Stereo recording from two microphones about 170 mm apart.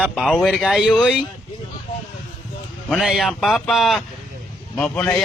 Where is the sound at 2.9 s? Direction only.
Centre (ahead or behind).